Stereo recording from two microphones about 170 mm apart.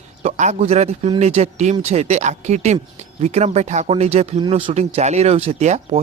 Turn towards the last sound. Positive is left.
turn(degrees=-40)  # may be behind; listen again after turning